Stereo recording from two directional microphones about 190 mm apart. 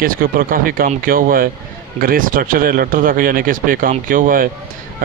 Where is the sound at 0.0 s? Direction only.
50° right (ahead or behind).